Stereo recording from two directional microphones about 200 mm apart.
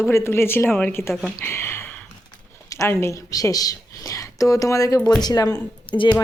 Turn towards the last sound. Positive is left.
turn(degrees=25)  # may be behind; listen again after turning